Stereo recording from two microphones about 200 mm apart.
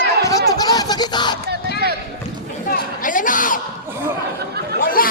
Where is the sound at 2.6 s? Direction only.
45° left (ahead or behind).